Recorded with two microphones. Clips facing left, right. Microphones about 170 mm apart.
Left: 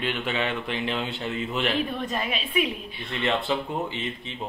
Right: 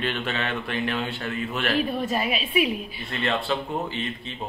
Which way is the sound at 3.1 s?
20° left (ahead or behind).